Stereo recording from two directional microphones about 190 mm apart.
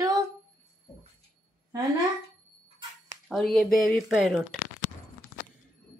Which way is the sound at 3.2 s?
Centre (ahead or behind).